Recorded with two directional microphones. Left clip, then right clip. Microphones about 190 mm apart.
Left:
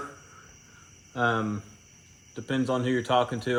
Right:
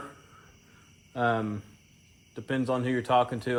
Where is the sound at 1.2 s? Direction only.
25° right (ahead or behind).